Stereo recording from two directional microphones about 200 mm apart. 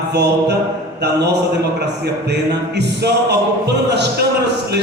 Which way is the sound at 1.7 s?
55° right (ahead or behind).